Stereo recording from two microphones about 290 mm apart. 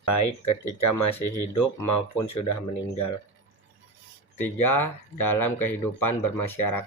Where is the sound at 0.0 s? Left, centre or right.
Left.